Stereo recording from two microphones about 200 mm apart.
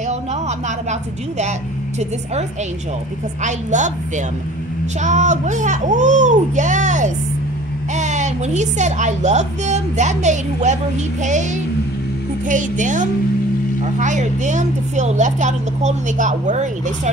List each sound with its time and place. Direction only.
3.4 s a woman's voice: 35° right (ahead or behind)
5.0 s a woman's voice: 35° right (ahead or behind)
12.4 s a woman's voice: 40° right (ahead or behind)